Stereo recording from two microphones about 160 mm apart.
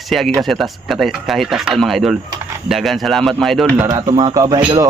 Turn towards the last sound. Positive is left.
turn(degrees=-25)  # may be behind; listen again after turning